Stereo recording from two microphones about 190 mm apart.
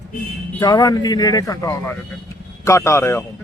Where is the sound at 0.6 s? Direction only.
20° left (ahead or behind).